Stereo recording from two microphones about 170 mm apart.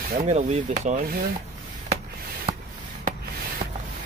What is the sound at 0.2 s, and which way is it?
Rub, 40° right (ahead or behind).